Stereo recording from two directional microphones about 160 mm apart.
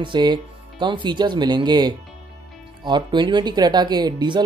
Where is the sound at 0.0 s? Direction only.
30° right (ahead or behind).